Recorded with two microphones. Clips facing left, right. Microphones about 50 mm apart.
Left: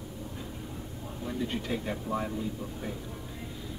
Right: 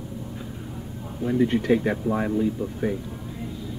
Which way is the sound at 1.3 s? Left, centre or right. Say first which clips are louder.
Right 12 dB; right.